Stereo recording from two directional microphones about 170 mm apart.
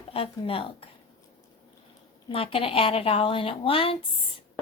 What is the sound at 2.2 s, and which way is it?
A woman's voice, 30° left (ahead or behind).